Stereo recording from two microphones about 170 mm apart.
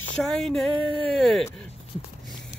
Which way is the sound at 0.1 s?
5° left (ahead or behind).